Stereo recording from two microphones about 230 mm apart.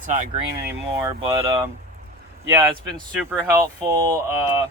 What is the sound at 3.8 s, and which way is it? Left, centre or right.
Speech, centre.